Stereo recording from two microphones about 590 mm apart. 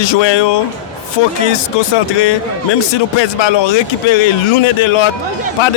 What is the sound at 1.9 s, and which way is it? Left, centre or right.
A man's voice, left.